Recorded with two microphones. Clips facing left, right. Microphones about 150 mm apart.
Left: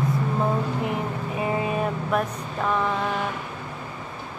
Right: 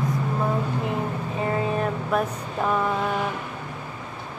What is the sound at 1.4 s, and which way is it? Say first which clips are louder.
Vehicle: even; 10° left (ahead or behind).